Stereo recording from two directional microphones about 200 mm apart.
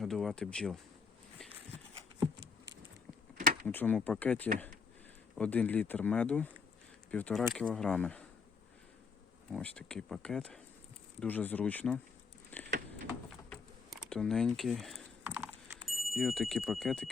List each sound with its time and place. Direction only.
0.0 s speech: centre (ahead or behind)
3.3 s a sound: 40° right (ahead or behind)
3.7 s speech: 10° left (ahead or behind)
9.5 s speech: 5° left (ahead or behind)
12.5 s a sound: 10° left (ahead or behind)
15.9 s speech: centre (ahead or behind)